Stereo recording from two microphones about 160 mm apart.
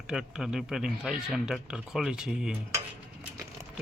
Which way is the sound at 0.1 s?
5° right (ahead or behind).